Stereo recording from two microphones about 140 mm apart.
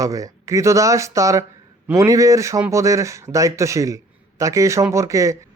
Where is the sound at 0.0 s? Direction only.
25° right (ahead or behind).